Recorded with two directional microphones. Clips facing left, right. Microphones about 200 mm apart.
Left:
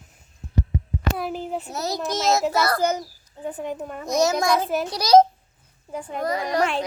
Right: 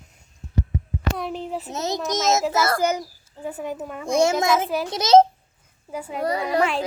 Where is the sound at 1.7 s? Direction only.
20° right (ahead or behind).